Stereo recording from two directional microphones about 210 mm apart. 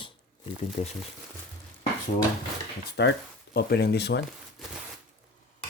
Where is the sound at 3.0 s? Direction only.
55° left (ahead or behind).